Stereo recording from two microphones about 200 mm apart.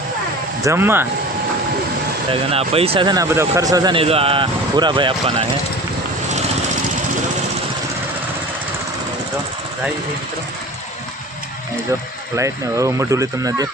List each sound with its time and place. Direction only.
0.6 s speech: 15° right (ahead or behind)
2.3 s speech: 30° right (ahead or behind)
12.4 s speech: 15° right (ahead or behind)